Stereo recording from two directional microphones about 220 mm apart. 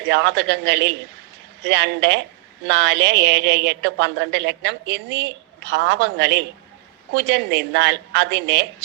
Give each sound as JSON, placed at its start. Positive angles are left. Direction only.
{"t": 0.1, "sound": "a woman's voice", "side_deg": -50}